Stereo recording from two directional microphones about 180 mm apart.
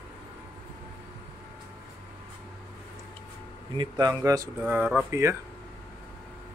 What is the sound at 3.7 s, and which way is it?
Speech, 20° right (ahead or behind).